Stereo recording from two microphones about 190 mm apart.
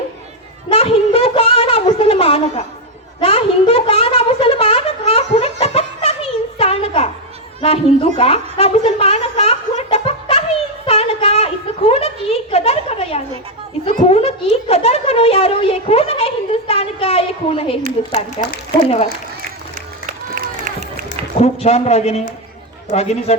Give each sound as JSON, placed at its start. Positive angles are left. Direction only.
{"t": 0.7, "sound": "a sound", "side_deg": 30}
{"t": 18.4, "sound": "a man's voice", "side_deg": 35}
{"t": 20.3, "sound": "run", "side_deg": -50}
{"t": 21.1, "sound": "a man's voice", "side_deg": 35}